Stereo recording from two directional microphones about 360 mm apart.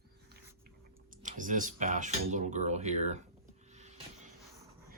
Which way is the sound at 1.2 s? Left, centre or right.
Right.